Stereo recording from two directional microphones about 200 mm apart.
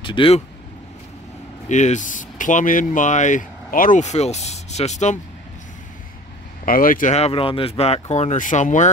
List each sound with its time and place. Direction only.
0.0 s speech: 25° left (ahead or behind)
1.7 s speech: 35° left (ahead or behind)
6.6 s speech: 45° left (ahead or behind)